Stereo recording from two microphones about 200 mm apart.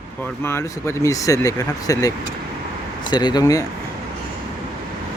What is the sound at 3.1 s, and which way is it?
Speech, 20° left (ahead or behind).